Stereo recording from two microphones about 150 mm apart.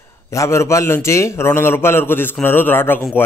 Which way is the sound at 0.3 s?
20° left (ahead or behind).